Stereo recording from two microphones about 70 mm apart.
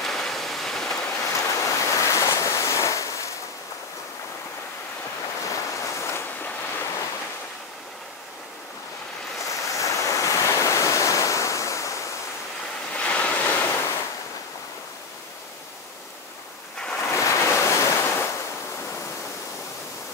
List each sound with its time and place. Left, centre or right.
0.0 s a sound: centre
1.0 s waves: left
5.4 s waves: left
9.4 s waves: left
12.9 s waves: centre
17.1 s waves: left